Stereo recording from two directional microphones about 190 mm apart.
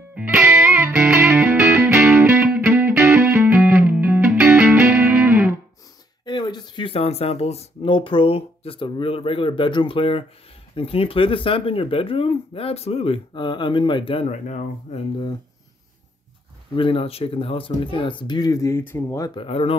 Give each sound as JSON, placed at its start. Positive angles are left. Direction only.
{"t": 0.1, "sound": "music", "side_deg": -10}
{"t": 6.2, "sound": "speech", "side_deg": 25}
{"t": 16.7, "sound": "speech", "side_deg": 30}
{"t": 19.4, "sound": "speech", "side_deg": 30}